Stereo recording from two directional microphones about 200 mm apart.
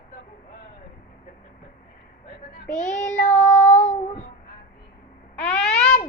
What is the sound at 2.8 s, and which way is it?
Child singing, 40° left (ahead or behind).